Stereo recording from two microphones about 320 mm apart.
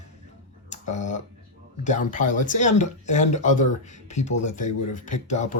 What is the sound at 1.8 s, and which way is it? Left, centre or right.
Speech, left.